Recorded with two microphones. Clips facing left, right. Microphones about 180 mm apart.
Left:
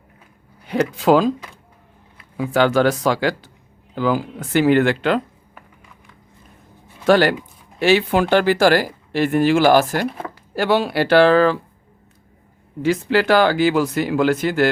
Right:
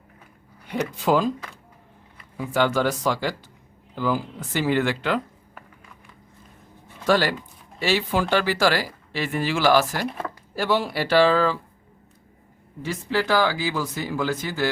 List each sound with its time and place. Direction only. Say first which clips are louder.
0.7 s speech: left 6 dB; 90° left
2.4 s speech: left 6 dB; 80° left; by 5.2 s 60° left (ahead or behind)
7.0 s speech: left 6 dB; 60° left (ahead or behind)
10.5 s speech: left 6 dB; 70° left (ahead or behind)
12.8 s speech: left 8 dB; 80° left